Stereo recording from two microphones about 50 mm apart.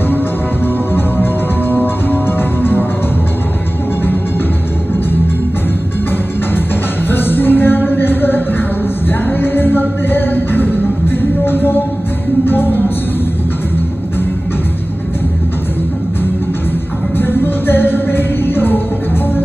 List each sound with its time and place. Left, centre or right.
0.9 s music: left
7.1 s music: left
17.2 s music: left